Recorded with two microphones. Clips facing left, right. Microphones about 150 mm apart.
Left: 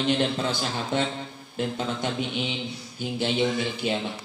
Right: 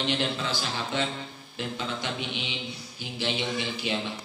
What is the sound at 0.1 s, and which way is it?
Mantra, 45° left (ahead or behind).